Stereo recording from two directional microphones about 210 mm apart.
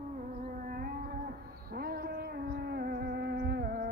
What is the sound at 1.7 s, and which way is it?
Music, 45° right (ahead or behind).